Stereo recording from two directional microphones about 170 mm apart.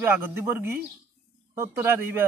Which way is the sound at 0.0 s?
15° right (ahead or behind).